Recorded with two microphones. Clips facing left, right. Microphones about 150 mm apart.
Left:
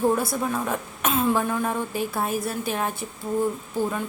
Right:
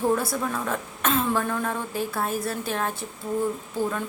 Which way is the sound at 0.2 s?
15° left (ahead or behind).